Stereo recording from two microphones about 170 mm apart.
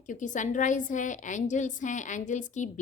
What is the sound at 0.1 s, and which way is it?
A woman's voice, 50° left (ahead or behind).